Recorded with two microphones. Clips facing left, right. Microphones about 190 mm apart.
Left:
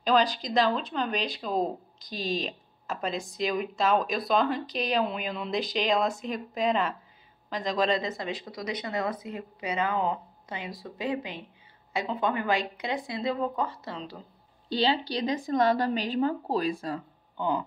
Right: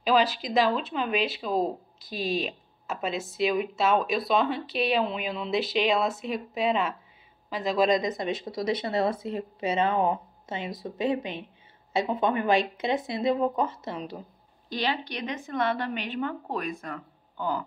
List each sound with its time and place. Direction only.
0.0 s speech: 5° right (ahead or behind)
14.7 s a woman's voice: 30° left (ahead or behind)